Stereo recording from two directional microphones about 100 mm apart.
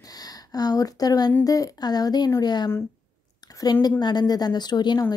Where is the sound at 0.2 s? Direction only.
40° left (ahead or behind).